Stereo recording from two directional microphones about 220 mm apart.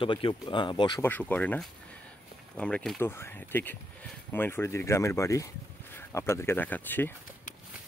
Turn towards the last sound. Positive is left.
turn(degrees=10)  # may be behind; listen again after turning